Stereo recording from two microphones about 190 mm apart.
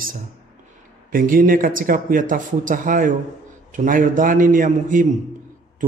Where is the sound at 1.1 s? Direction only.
45° right (ahead or behind).